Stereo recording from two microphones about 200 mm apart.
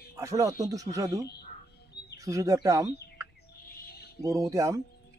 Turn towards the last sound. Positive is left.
turn(degrees=-15)  # may be behind; listen again after turning